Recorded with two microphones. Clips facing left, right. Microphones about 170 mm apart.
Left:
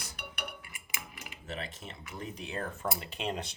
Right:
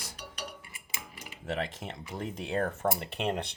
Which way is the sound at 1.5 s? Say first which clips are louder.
Right 7 dB; 90° right.